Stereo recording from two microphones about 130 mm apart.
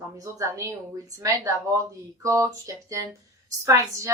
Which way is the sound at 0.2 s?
25° right (ahead or behind).